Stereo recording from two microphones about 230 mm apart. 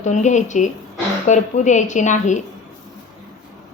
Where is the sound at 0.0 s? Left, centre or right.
Left.